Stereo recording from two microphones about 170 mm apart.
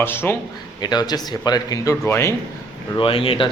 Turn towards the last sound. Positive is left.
turn(degrees=30)  # may be behind; listen again after turning